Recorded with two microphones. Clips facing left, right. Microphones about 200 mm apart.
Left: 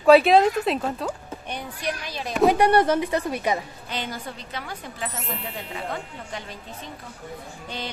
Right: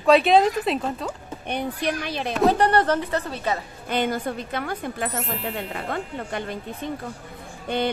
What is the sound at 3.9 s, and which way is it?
Speech, 50° right (ahead or behind).